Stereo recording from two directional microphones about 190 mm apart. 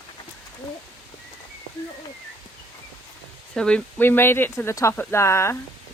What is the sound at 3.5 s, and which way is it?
Speech, 5° left (ahead or behind).